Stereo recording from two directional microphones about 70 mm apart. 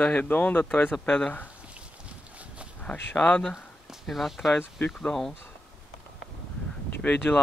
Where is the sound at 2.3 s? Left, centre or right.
Centre.